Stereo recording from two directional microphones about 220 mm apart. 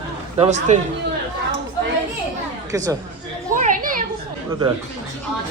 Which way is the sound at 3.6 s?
40° right (ahead or behind).